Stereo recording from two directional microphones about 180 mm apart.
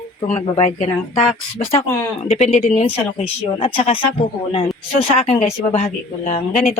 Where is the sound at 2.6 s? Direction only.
35° left (ahead or behind).